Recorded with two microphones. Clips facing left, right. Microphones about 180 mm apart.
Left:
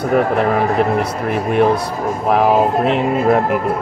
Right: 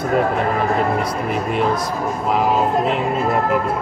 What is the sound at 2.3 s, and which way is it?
Speech, 65° left (ahead or behind).